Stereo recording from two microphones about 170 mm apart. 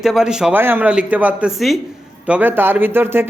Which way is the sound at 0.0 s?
Centre (ahead or behind).